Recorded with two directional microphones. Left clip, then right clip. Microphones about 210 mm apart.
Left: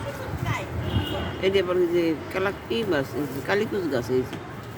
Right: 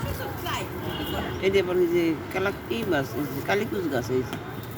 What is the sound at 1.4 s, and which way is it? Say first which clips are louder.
Speech: left 1 dB; 15° left (ahead or behind).